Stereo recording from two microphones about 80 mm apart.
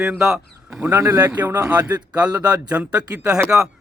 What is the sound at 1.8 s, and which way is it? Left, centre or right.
A man's voice, centre.